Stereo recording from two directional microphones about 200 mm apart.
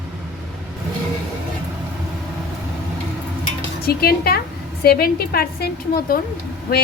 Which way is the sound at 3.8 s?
50° left (ahead or behind).